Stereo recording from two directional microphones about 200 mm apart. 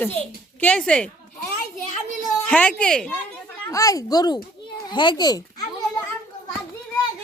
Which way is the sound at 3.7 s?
15° left (ahead or behind).